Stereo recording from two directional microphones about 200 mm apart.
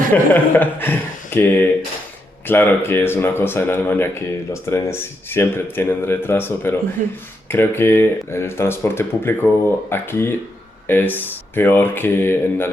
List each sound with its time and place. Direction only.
0.1 s speech: 10° left (ahead or behind)
7.0 s speech: 40° right (ahead or behind)
7.4 s speech: 10° left (ahead or behind)